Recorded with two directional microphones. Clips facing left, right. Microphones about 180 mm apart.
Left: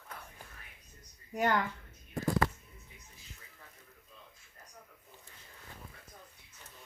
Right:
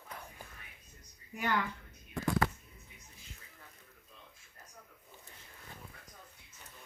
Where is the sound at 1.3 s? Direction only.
45° left (ahead or behind).